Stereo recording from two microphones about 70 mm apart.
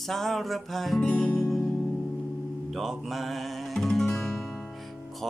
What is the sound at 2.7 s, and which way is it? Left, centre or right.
Music, centre.